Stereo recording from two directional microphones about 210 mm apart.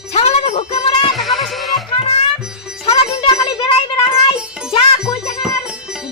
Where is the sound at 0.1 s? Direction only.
30° left (ahead or behind).